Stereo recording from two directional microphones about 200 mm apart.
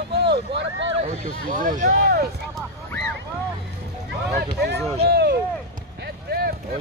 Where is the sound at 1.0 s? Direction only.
40° right (ahead or behind).